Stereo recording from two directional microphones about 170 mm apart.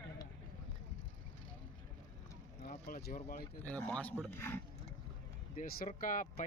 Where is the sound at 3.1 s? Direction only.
40° left (ahead or behind).